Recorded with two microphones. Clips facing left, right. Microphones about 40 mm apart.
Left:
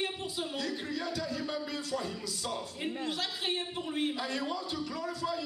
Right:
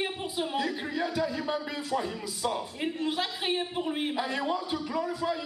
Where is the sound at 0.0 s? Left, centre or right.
Centre.